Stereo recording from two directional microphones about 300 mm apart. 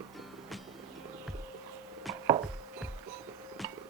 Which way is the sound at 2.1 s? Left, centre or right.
Centre.